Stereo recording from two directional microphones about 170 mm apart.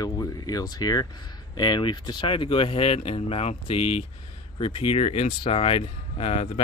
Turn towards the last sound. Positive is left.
turn(degrees=35)  # may be behind; listen again after turning